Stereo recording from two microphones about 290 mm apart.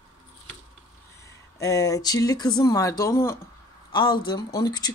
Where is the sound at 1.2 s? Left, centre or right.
Centre.